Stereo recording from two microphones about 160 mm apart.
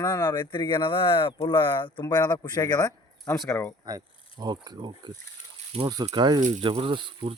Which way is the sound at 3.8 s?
25° right (ahead or behind).